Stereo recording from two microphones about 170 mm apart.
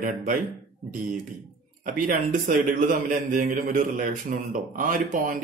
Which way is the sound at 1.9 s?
50° right (ahead or behind).